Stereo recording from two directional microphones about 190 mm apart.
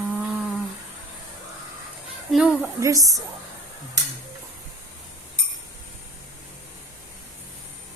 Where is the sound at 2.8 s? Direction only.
15° right (ahead or behind).